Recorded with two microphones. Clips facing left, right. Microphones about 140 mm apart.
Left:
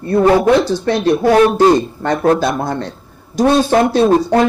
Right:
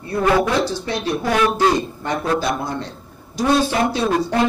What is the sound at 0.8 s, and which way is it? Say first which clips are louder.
A woman's voice: left 9 dB; 55° left (ahead or behind).